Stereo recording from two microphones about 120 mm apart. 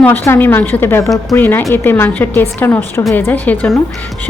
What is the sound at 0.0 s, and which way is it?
A woman's voice, 15° left (ahead or behind).